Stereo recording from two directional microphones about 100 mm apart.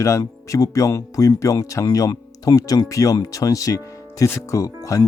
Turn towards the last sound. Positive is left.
turn(degrees=35)  # may be behind; listen again after turning